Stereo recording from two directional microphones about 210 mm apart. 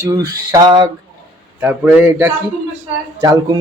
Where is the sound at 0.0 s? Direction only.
15° right (ahead or behind).